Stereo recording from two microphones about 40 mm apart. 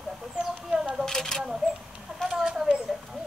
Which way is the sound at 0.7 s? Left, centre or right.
Centre.